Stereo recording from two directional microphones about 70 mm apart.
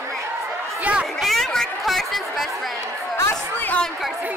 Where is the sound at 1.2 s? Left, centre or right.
Centre.